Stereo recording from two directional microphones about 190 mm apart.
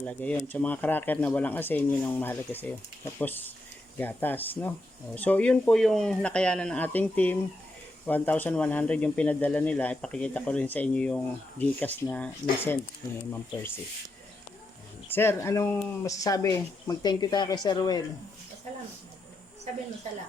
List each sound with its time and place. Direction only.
0.0 s speech: 10° left (ahead or behind)
15.1 s speech: 10° left (ahead or behind)